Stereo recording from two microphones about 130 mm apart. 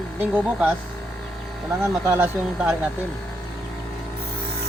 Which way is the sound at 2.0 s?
15° right (ahead or behind).